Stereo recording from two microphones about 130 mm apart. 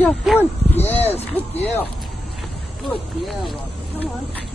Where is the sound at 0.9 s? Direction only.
55° left (ahead or behind).